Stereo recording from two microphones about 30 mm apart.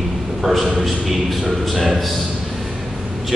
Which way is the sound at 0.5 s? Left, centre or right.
Centre.